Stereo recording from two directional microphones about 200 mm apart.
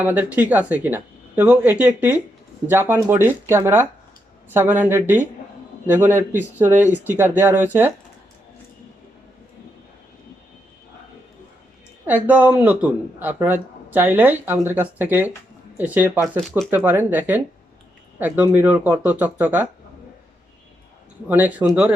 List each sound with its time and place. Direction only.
0.0 s speech: 10° right (ahead or behind)
12.0 s speech: 10° right (ahead or behind)
21.2 s speech: 10° right (ahead or behind)